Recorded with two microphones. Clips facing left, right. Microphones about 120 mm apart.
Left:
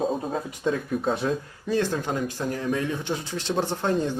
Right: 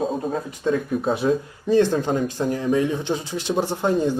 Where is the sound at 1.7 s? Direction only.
25° right (ahead or behind).